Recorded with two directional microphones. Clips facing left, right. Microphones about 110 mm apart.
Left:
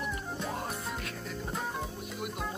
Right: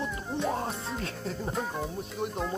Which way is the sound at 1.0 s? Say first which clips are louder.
Right 5 dB; 30° right (ahead or behind).